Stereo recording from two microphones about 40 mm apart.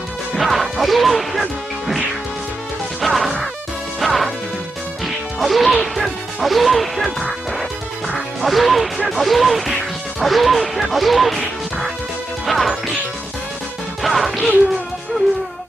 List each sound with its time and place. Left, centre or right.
0.3 s speech: centre
3.0 s music: centre
8.4 s music: centre
10.2 s speech: centre
12.4 s music: centre
14.0 s music: centre